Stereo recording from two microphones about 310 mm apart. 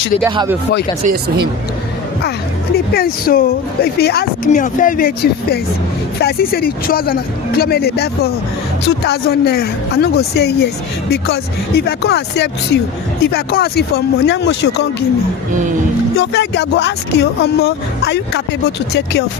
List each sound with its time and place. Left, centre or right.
0.3 s speech: centre
1.0 s speech: right
2.7 s speech: left
16.1 s speech: left